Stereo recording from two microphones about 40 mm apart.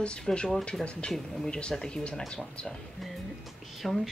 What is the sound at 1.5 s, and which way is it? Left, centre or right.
Speech, left.